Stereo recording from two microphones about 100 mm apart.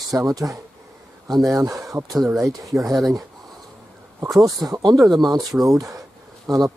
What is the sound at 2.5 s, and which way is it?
Speech, 35° right (ahead or behind).